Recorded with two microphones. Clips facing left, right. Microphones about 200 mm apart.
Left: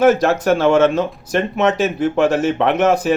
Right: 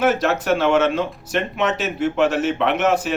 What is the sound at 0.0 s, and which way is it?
Speech, 45° left (ahead or behind).